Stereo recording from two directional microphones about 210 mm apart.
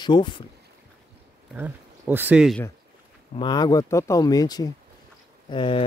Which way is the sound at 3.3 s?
20° left (ahead or behind).